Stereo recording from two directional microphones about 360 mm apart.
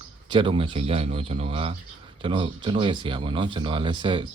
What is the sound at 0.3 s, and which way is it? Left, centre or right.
Speech, centre.